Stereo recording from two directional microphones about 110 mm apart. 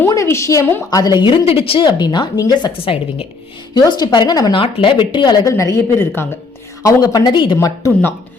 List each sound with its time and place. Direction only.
0.1 s a woman's voice: 25° left (ahead or behind)
0.9 s a woman's voice: 35° left (ahead or behind); by 1.8 s 60° left (ahead or behind)
1.8 s speech: 40° left (ahead or behind)
2.7 s a woman's voice: 55° left (ahead or behind)
3.8 s speech: 40° left (ahead or behind)
4.5 s speech: 50° left (ahead or behind); by 7.9 s 30° left (ahead or behind)